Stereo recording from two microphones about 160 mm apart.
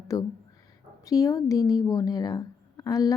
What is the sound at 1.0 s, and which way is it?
Speech, 20° left (ahead or behind).